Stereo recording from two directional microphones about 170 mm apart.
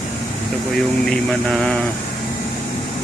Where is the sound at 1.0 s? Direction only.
5° left (ahead or behind).